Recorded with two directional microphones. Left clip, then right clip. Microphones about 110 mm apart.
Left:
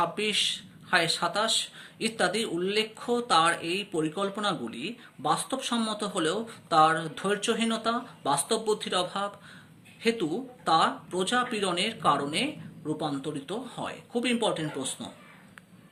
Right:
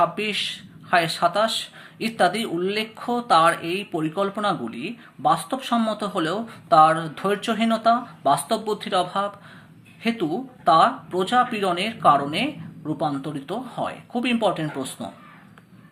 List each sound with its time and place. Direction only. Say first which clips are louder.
0.0 s speech: right 4 dB; 35° left (ahead or behind)